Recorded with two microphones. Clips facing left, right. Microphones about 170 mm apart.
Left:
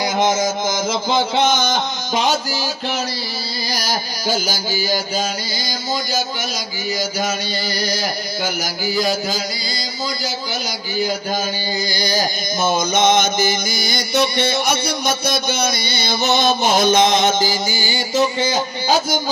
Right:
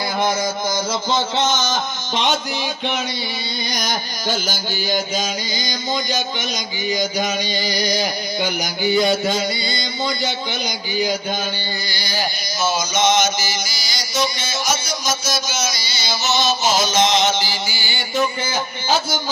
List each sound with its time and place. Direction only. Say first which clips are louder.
0.2 s music: left 3 dB; 20° left (ahead or behind)
1.1 s a man's voice: left 3 dB; 10° left (ahead or behind)
2.5 s carnatic music: even; centre (ahead or behind)
7.7 s a sound: right 1 dB; 15° right (ahead or behind)
8.8 s carnatic music: right 4 dB; centre (ahead or behind)
11.9 s a man's voice: left 8 dB; 40° left (ahead or behind)
12.6 s music: left 2 dB; 55° left (ahead or behind)
18.2 s a man's voice: left 3 dB; 30° left (ahead or behind)